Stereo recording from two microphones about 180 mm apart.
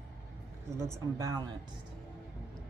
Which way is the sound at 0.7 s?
15° right (ahead or behind).